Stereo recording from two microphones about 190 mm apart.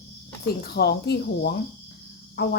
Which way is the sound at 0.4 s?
60° left (ahead or behind).